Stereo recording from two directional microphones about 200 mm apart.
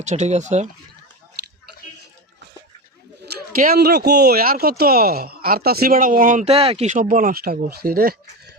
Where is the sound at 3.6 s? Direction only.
50° right (ahead or behind).